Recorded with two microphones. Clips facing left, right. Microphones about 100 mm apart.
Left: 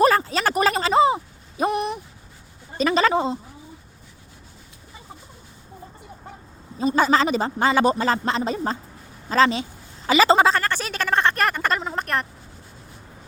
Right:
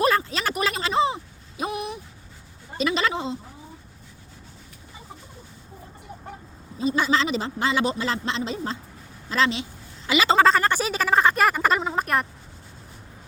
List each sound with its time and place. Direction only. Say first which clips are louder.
0.0 s a sound: left 4 dB; 40° left (ahead or behind)
1.6 s a sound: left 6 dB; 55° left (ahead or behind)
2.7 s speech: left 5 dB; 40° left (ahead or behind)
6.7 s speech: left 4 dB; 40° left (ahead or behind)
10.1 s speech: left 5 dB; 40° left (ahead or behind)
10.6 s speech: right 3 dB; 10° right (ahead or behind)